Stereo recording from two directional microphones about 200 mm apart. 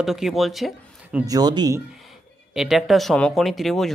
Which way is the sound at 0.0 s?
Centre (ahead or behind).